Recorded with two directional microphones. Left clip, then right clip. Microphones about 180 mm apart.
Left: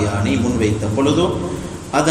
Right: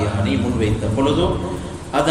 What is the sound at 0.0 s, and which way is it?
A man's voice, 15° left (ahead or behind).